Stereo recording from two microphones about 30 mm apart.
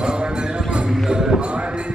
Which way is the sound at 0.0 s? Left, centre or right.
Right.